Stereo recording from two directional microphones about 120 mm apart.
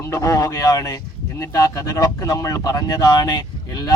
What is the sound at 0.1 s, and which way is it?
Speech, 25° left (ahead or behind).